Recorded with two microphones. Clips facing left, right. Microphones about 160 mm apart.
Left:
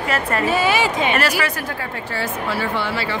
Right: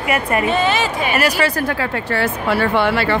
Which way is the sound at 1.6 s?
65° right (ahead or behind).